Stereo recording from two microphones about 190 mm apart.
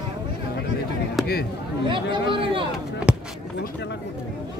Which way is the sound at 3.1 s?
5° right (ahead or behind).